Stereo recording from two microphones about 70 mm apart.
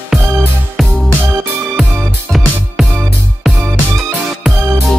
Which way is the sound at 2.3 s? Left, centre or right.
Centre.